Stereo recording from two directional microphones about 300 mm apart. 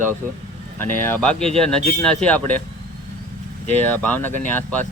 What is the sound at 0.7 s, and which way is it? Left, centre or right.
Speech, centre.